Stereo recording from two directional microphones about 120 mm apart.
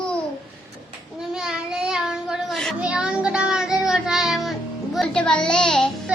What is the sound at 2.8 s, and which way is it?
Child singing, 10° right (ahead or behind).